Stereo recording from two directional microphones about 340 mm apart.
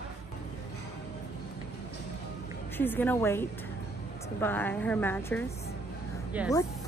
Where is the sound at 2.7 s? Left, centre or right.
Centre.